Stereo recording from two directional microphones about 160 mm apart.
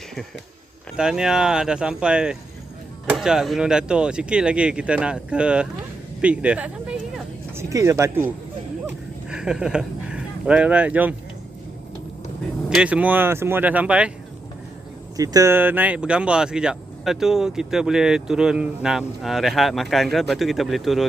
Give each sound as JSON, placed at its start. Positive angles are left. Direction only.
{"t": 0.9, "sound": "speech", "side_deg": -5}
{"t": 7.5, "sound": "speech", "side_deg": -20}
{"t": 9.3, "sound": "speech", "side_deg": -5}
{"t": 12.7, "sound": "speech", "side_deg": -10}
{"t": 15.1, "sound": "speech", "side_deg": -20}